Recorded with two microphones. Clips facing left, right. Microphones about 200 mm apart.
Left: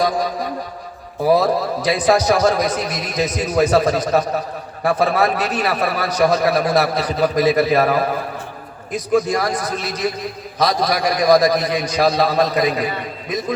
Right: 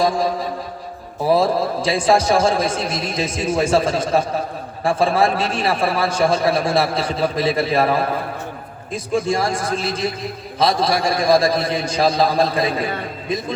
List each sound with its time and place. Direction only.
0.0 s a man's voice: 25° right (ahead or behind)